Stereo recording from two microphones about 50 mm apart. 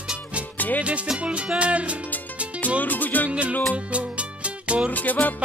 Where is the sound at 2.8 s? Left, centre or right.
Left.